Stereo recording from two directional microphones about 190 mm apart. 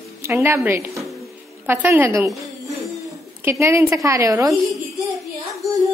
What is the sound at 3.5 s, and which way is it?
A woman's voice, 15° right (ahead or behind).